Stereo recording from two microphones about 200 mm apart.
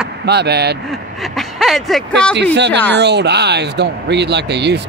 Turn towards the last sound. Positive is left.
turn(degrees=-55)  # may be behind; listen again after turning